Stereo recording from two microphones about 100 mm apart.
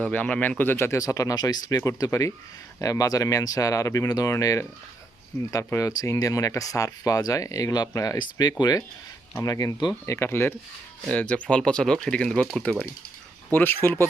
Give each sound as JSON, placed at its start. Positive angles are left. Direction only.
{"t": 0.0, "sound": "speech", "side_deg": 15}
{"t": 11.1, "sound": "speech", "side_deg": 15}
{"t": 13.5, "sound": "speech", "side_deg": 20}